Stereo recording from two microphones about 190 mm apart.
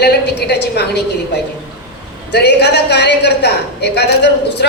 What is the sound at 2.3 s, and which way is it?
A woman's voice, 60° left (ahead or behind).